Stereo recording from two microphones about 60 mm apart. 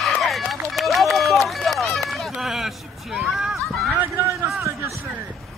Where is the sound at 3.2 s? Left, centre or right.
Centre.